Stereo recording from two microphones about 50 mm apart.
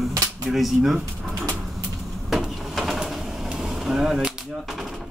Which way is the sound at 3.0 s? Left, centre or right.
Centre.